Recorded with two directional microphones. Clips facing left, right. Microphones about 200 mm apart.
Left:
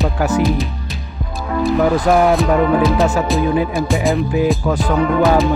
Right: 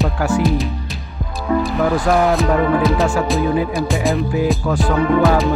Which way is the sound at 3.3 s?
Centre (ahead or behind).